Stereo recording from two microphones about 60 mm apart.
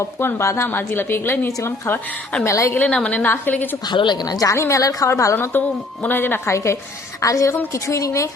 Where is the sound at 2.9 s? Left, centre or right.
Centre.